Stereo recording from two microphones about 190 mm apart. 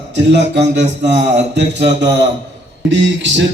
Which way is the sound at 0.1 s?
65° right (ahead or behind).